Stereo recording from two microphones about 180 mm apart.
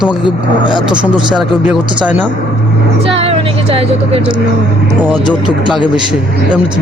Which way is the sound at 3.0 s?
30° right (ahead or behind).